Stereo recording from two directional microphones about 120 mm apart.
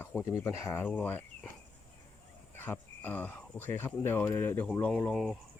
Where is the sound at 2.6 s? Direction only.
15° left (ahead or behind).